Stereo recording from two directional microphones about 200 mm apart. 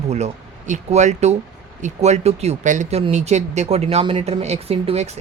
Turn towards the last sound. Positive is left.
turn(degrees=-30)  # may be behind; listen again after turning